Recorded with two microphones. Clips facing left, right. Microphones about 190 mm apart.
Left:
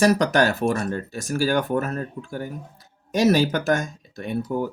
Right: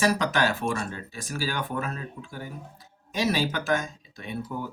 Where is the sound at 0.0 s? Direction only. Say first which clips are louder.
Left 6 dB; 45° left (ahead or behind).